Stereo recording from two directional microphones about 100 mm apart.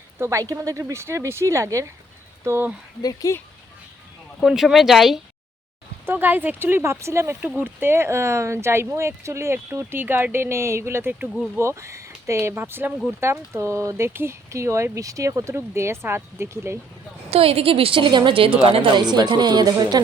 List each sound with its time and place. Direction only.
0.2 s speech: 30° right (ahead or behind)
3.0 s speech: 40° left (ahead or behind)
4.4 s speech: 5° right (ahead or behind)
6.1 s speech: 20° right (ahead or behind)
17.2 s a woman's voice: 85° right; by 18.5 s 60° right (ahead or behind)
18.6 s speech: 70° right (ahead or behind); by 20.0 s 45° right (ahead or behind)